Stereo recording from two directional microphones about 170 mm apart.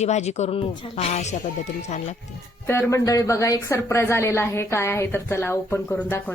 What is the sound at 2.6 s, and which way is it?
Speech, 15° left (ahead or behind).